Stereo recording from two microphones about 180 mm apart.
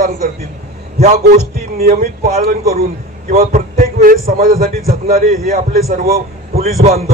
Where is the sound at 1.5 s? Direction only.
55° right (ahead or behind).